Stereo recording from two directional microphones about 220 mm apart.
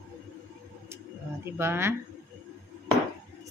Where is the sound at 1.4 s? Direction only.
10° right (ahead or behind).